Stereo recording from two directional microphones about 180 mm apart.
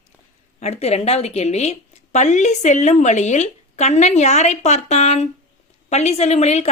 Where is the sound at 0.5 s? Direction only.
35° left (ahead or behind).